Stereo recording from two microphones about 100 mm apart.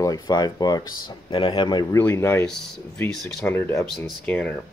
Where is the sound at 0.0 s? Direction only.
40° left (ahead or behind).